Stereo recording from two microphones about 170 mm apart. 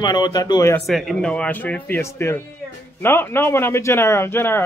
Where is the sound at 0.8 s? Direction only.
Centre (ahead or behind).